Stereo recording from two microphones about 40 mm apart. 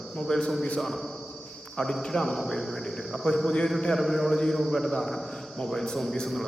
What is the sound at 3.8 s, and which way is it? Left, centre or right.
Mantra, centre.